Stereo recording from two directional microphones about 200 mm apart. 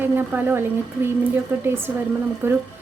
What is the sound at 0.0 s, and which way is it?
Speech, 10° right (ahead or behind).